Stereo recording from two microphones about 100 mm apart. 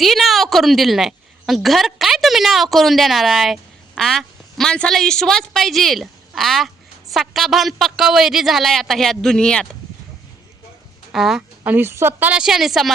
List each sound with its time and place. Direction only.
0.0 s a woman's voice: centre (ahead or behind)
11.1 s a man's voice: 5° right (ahead or behind)
11.6 s a woman's voice: 20° right (ahead or behind)
12.4 s a man's voice: 5° right (ahead or behind)